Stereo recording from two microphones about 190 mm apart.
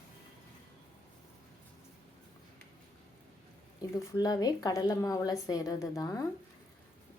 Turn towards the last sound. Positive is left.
turn(degrees=20)  # may be behind; listen again after turning